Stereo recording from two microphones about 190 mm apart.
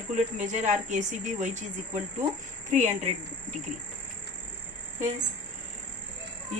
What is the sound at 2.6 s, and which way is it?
Speech, 40° right (ahead or behind).